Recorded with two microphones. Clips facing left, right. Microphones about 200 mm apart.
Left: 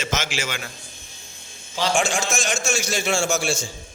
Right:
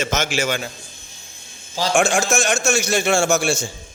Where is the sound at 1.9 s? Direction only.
70° right (ahead or behind).